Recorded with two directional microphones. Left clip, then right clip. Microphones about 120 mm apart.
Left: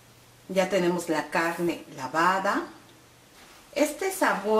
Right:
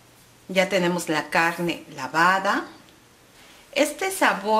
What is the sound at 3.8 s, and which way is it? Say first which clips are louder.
Speech: right 3 dB; 55° right (ahead or behind).